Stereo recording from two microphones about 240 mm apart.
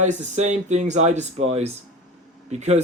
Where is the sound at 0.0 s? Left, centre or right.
Right.